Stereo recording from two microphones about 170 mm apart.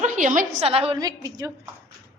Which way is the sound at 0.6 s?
35° right (ahead or behind).